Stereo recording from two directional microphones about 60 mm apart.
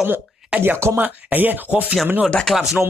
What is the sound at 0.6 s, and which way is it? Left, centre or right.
Speech, right.